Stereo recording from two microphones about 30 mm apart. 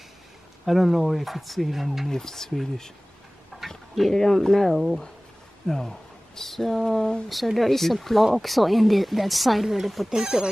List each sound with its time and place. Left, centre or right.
0.7 s speech: centre
2.0 s speech: centre
3.5 s a sound: centre
4.1 s speech: centre
5.7 s speech: centre
7.2 s speech: centre
10.0 s speech: centre